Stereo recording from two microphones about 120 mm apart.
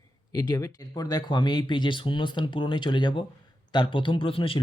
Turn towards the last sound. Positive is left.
turn(degrees=50)  # may be behind; listen again after turning